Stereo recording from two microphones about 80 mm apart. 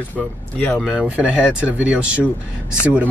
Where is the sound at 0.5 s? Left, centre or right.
Centre.